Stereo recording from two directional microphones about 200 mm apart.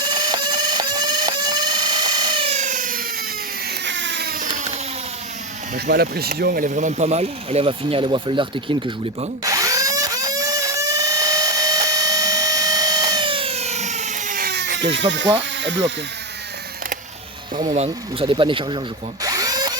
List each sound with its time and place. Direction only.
0.1 s a sound: 20° right (ahead or behind); by 3.0 s 40° right (ahead or behind)
3.8 s a sound: 65° right (ahead or behind); by 4.6 s 40° right (ahead or behind)
5.7 s speech: 55° right (ahead or behind); by 8.7 s 25° right (ahead or behind)
9.4 s drill: 15° right (ahead or behind); by 15.3 s 65° right (ahead or behind)
15.4 s speech: 65° right (ahead or behind)
17.6 s speech: 35° right (ahead or behind)
19.2 s drill: 20° right (ahead or behind)